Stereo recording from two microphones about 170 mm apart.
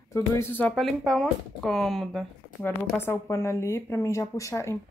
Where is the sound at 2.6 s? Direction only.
15° left (ahead or behind).